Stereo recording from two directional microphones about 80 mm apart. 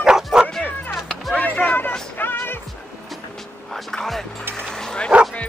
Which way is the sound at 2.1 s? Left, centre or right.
Left.